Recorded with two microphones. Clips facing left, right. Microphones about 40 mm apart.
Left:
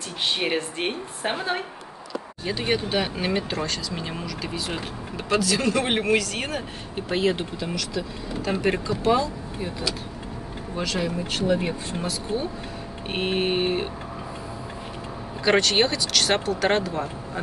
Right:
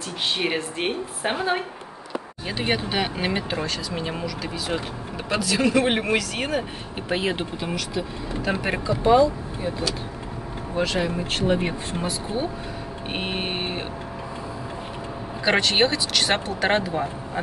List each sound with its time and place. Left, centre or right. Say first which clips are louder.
0.2 s a woman's voice: even; centre; by 8.0 s right
8.5 s speech: left 1 dB; centre
10.8 s speech: right 3 dB; right
12.0 s speech: right 2 dB; centre
13.1 s a woman's voice: left 4 dB; centre
15.4 s speech: even; centre